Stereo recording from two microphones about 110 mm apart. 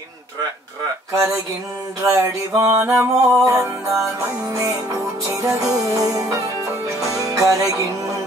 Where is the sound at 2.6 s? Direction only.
25° right (ahead or behind).